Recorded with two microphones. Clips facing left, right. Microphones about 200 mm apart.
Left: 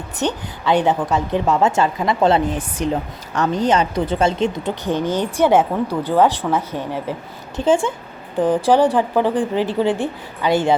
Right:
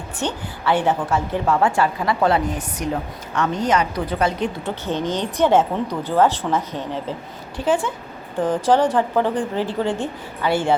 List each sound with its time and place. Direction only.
0.2 s a woman's voice: 15° left (ahead or behind)
4.6 s speech: 15° left (ahead or behind)
7.5 s a woman's voice: 25° left (ahead or behind)
8.6 s speech: 15° left (ahead or behind)